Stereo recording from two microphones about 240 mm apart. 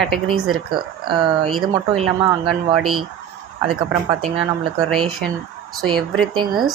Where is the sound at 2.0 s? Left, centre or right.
Centre.